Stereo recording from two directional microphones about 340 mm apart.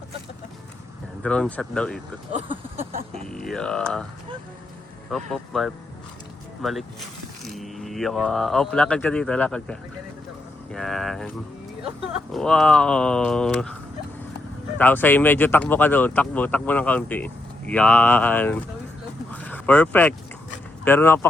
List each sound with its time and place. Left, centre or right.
1.2 s speech: centre
2.9 s vehicle: centre
3.2 s speech: centre
5.1 s speech: centre
12.3 s speech: centre
14.8 s speech: centre
19.3 s vehicle: centre
20.8 s speech: centre